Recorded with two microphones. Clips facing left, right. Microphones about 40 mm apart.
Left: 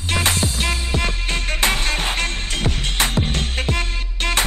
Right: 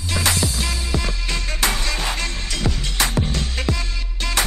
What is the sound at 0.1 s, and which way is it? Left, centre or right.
Music, left.